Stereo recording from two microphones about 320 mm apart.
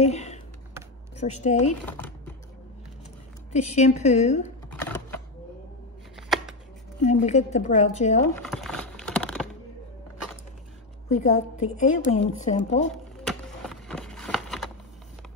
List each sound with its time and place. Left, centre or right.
0.0 s speech: left
3.5 s a woman's voice: left
4.6 s typing: centre
6.1 s shuffling cards: centre
7.0 s a woman's voice: left
8.4 s a sound: centre
11.1 s a woman's voice: left
13.2 s a sound: centre